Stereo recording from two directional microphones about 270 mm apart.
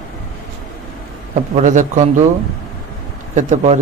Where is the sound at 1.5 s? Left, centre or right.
Right.